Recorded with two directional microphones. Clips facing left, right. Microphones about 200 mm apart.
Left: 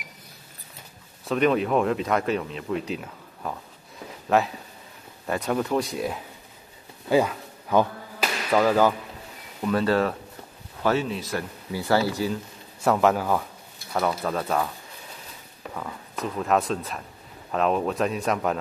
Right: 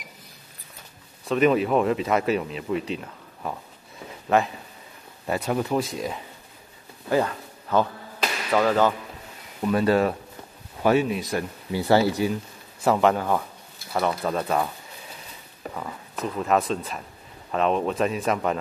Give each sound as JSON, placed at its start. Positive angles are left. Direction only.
{"t": 1.3, "sound": "speech", "side_deg": -5}
{"t": 7.1, "sound": "a sound", "side_deg": 10}
{"t": 9.6, "sound": "speech", "side_deg": -10}
{"t": 12.8, "sound": "speech", "side_deg": 0}
{"t": 15.7, "sound": "speech", "side_deg": -5}